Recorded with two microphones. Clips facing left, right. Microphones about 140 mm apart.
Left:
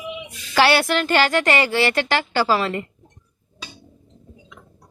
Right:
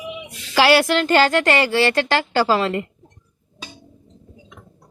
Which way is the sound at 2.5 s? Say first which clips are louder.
Right 2 dB; 20° right (ahead or behind).